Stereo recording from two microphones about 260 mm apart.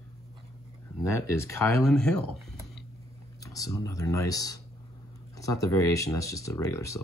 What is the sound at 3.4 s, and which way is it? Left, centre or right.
Speech, centre.